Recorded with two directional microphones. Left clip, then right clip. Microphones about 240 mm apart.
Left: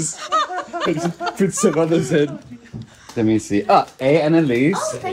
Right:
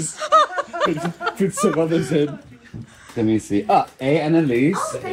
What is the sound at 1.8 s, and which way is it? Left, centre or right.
Speech, left.